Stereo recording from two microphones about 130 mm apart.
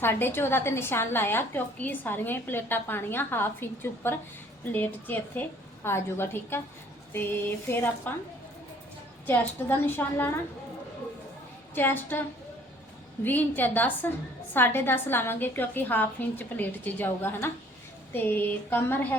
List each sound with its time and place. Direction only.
0.0 s a woman's voice: 15° left (ahead or behind)
9.2 s a woman's voice: 15° left (ahead or behind)
11.7 s a woman's voice: 15° left (ahead or behind)
13.2 s a woman's voice: 15° left (ahead or behind)